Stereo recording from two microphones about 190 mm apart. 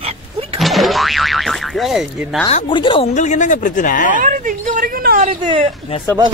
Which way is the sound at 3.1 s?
40° left (ahead or behind).